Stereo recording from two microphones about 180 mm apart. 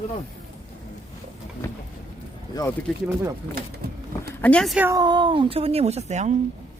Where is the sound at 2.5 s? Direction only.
20° left (ahead or behind).